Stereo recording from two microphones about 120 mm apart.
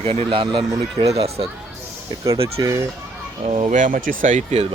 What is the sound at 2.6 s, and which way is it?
Speech, 30° right (ahead or behind).